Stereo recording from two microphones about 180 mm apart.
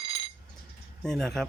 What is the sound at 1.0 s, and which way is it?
Speech, 5° left (ahead or behind).